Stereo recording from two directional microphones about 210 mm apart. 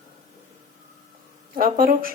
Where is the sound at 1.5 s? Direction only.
40° right (ahead or behind).